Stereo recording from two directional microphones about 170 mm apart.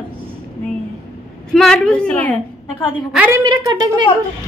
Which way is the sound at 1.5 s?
5° left (ahead or behind).